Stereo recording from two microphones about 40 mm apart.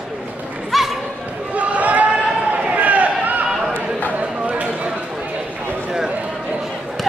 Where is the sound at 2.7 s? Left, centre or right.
Right.